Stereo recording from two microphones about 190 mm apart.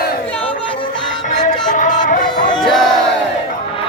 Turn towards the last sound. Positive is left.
turn(degrees=0)  # may be behind; listen again after turning